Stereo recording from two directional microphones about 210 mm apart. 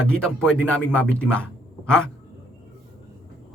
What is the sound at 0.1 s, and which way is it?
Speech, 5° left (ahead or behind).